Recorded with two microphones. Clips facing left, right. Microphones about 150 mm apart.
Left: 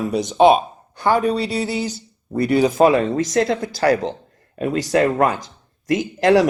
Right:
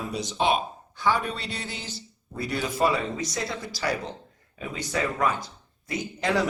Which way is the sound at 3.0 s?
80° left.